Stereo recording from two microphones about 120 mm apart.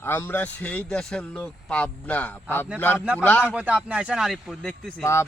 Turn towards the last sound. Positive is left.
turn(degrees=25)  # may be behind; listen again after turning